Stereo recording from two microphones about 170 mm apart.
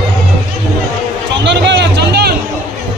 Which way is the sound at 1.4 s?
90° right.